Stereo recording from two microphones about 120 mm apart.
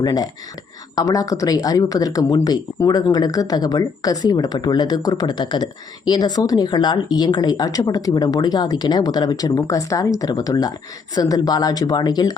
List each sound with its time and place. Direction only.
0.0 s speech: 30° left (ahead or behind)